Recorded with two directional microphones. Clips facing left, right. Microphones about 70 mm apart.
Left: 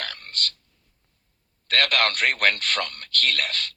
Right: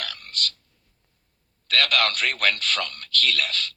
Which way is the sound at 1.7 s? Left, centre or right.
Left.